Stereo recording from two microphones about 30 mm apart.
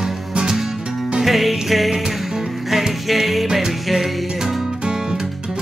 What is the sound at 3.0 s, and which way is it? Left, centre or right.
Music, centre.